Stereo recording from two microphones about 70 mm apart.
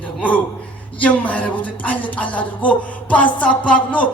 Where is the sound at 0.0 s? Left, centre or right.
Left.